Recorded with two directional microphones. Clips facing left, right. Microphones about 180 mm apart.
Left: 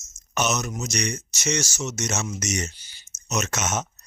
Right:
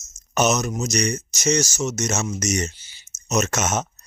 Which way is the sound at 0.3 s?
40° right (ahead or behind).